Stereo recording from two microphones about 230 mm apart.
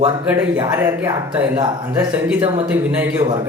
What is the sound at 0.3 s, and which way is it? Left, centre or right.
Speech, centre.